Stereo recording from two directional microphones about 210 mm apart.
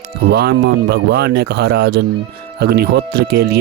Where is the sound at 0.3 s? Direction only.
50° right (ahead or behind).